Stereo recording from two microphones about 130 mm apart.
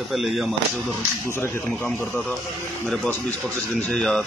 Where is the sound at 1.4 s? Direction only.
15° left (ahead or behind).